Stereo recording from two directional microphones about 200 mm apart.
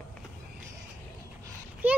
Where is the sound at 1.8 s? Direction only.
10° right (ahead or behind).